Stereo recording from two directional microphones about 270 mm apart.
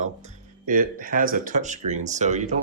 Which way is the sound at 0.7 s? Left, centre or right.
Right.